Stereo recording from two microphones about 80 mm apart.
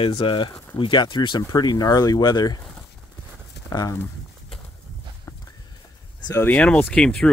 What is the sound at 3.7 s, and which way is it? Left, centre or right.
Speech, left.